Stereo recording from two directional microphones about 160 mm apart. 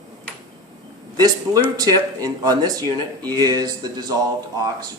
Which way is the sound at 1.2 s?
25° right (ahead or behind).